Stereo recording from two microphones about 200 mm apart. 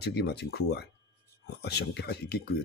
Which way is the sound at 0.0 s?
55° left (ahead or behind).